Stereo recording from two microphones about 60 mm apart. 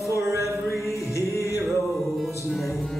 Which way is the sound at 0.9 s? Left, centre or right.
Left.